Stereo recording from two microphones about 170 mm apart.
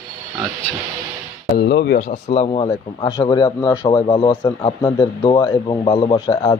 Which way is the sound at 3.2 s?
25° left (ahead or behind).